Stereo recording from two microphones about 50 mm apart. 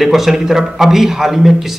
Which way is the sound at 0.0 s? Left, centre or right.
Centre.